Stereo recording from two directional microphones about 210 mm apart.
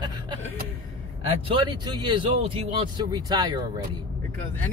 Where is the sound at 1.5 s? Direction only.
20° right (ahead or behind).